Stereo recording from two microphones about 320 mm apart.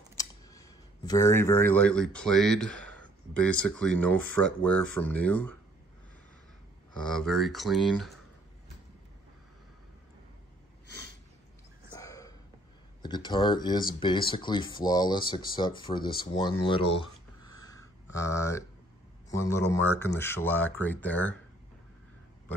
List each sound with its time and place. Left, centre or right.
0.2 s speech: centre
7.0 s speech: centre
12.0 s a sound: centre
13.0 s speech: centre
17.6 s a sound: centre
18.1 s speech: centre